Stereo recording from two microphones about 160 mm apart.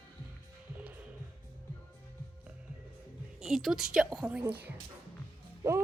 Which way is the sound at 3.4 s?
Centre (ahead or behind).